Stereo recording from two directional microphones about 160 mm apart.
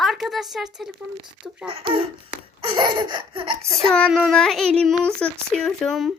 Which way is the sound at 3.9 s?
Centre (ahead or behind).